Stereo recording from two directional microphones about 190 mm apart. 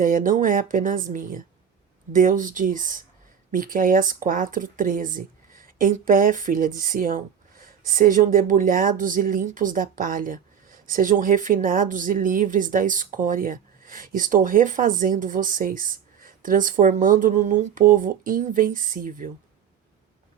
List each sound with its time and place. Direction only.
0.0 s speech: 45° right (ahead or behind)